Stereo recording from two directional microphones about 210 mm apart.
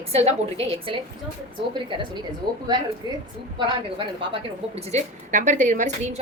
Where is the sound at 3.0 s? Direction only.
20° right (ahead or behind).